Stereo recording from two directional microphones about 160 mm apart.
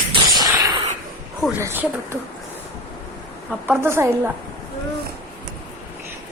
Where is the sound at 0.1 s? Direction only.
25° right (ahead or behind).